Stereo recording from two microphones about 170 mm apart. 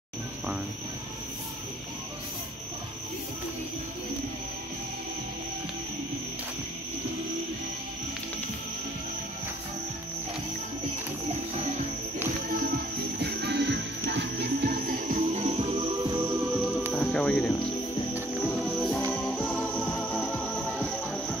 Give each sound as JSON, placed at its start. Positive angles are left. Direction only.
{"t": 12.7, "sound": "music", "side_deg": -75}
{"t": 16.0, "sound": "music", "side_deg": -25}
{"t": 16.9, "sound": "music", "side_deg": 5}